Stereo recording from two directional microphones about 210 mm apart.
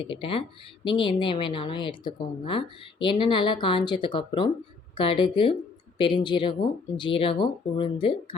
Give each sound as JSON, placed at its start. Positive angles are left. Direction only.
{"t": 0.0, "sound": "speech", "side_deg": 25}